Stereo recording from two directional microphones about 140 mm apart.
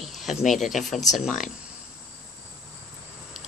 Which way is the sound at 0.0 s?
Centre (ahead or behind).